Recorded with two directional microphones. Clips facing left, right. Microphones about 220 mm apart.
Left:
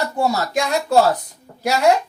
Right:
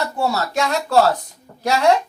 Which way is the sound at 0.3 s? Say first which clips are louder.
Right 1 dB; 15° left (ahead or behind).